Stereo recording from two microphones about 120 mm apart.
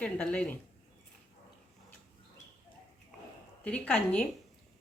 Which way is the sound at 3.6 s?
10° left (ahead or behind).